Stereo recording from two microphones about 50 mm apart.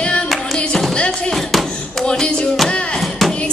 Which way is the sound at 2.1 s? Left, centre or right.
Centre.